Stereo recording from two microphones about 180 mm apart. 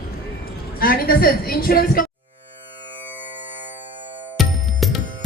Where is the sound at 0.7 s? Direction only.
55° left (ahead or behind).